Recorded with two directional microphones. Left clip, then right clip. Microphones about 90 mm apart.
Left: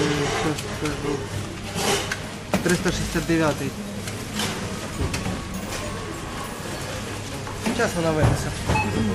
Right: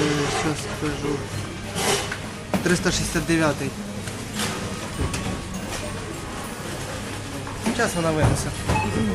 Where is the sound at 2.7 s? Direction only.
35° right (ahead or behind).